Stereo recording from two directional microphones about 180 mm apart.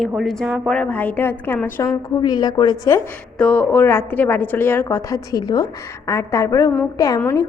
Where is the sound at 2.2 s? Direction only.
20° left (ahead or behind).